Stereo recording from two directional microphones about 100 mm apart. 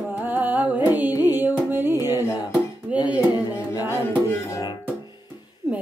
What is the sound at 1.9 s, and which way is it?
Music, 40° left (ahead or behind).